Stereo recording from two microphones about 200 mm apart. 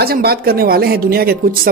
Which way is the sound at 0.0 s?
50° right (ahead or behind).